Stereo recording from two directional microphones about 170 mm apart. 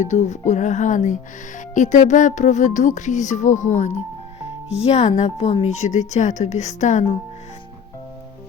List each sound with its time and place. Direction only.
0.0 s speech: 45° left (ahead or behind)